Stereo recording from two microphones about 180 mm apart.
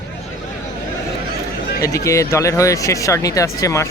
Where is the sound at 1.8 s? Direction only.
15° left (ahead or behind).